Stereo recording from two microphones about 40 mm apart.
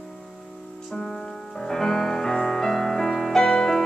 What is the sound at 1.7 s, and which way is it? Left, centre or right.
Music, centre.